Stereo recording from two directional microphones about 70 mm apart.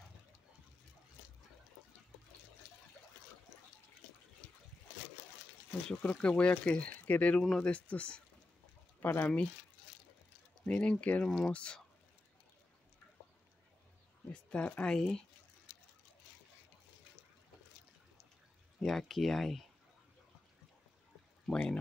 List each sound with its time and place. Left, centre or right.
5.9 s speech: centre
9.0 s speech: left
10.6 s speech: centre
11.2 s speech: centre
14.3 s speech: centre
18.8 s speech: centre
21.5 s speech: centre